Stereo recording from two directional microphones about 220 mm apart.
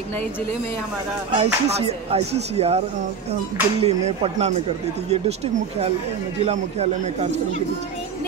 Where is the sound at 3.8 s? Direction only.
30° right (ahead or behind).